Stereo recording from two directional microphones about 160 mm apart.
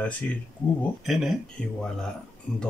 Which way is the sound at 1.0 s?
Centre (ahead or behind).